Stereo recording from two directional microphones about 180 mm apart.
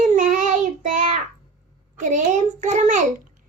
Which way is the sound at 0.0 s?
45° right (ahead or behind).